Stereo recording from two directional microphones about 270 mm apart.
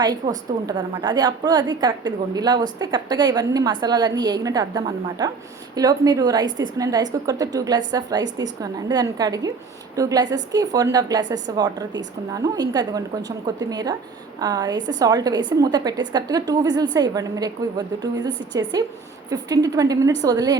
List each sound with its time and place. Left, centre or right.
0.7 s a woman's voice: centre